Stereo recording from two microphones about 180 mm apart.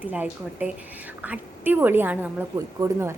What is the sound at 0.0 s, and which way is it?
A woman's voice, 10° right (ahead or behind).